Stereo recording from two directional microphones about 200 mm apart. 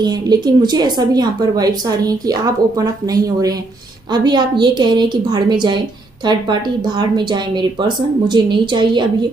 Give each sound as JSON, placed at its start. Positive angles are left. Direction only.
{"t": 0.0, "sound": "a woman's voice", "side_deg": -20}